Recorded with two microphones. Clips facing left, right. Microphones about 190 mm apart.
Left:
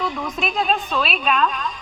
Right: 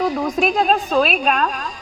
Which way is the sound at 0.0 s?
40° right (ahead or behind).